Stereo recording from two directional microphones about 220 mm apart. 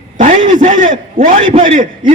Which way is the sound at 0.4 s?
20° right (ahead or behind).